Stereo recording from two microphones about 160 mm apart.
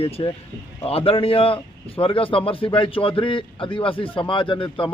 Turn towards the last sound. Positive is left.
turn(degrees=30)  # may be behind; listen again after turning